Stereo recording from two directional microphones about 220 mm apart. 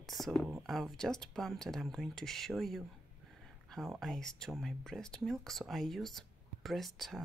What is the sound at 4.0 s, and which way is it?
Speech, centre (ahead or behind).